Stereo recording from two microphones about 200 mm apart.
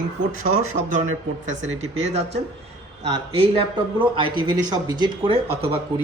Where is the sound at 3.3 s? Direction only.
25° right (ahead or behind).